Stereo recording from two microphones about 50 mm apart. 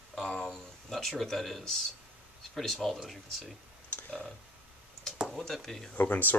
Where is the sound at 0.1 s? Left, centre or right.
Centre.